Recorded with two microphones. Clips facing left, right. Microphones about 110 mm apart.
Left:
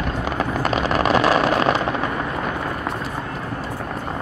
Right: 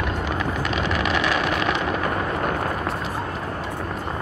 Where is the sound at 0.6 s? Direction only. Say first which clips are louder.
Left 4 dB; 40° left (ahead or behind).